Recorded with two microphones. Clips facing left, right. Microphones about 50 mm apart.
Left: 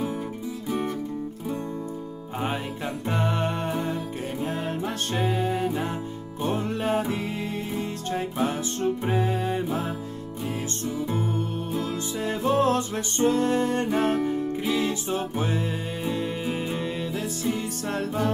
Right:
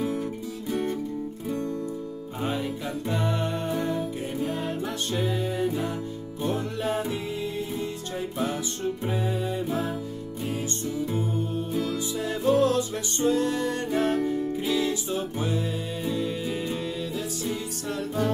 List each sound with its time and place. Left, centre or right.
0.7 s music: centre
3.1 s music: left
8.4 s music: left
12.4 s music: left